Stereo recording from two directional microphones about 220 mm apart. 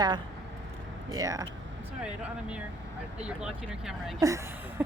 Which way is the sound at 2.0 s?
5° right (ahead or behind).